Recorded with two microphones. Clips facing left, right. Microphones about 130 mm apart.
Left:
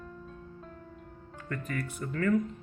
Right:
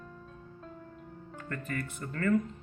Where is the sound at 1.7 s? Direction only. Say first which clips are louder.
Left 2 dB; centre (ahead or behind).